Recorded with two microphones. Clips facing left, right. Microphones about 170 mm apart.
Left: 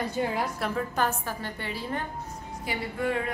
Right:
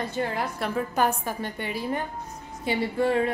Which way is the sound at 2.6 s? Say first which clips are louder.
Right 6 dB; 30° right (ahead or behind).